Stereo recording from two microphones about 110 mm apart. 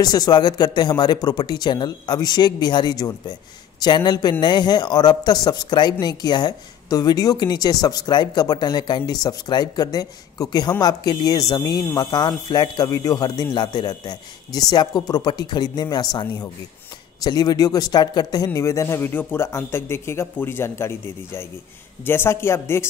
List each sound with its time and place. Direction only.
0.0 s a man's voice: 40° left (ahead or behind); by 22.8 s 20° left (ahead or behind)